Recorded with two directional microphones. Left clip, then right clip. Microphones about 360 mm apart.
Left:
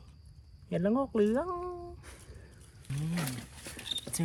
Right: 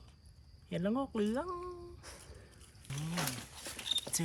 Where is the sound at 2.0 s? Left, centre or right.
Right.